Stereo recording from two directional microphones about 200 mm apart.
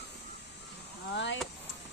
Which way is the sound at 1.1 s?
65° left (ahead or behind).